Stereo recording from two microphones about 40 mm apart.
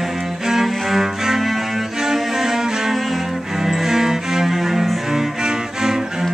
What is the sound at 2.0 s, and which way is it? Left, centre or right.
Music, centre.